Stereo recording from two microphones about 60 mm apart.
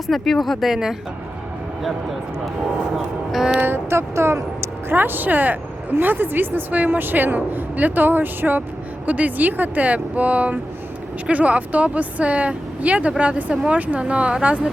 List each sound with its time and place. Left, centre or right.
0.1 s speech: centre
2.9 s speech: centre
3.6 s speech: right
4.9 s a woman's voice: right; by 14.7 s centre